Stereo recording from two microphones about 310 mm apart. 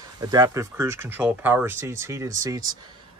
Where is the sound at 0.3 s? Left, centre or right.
Centre.